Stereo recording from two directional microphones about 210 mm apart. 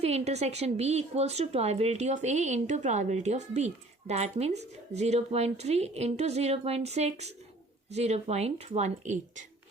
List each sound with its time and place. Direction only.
0.0 s a woman's voice: 30° right (ahead or behind)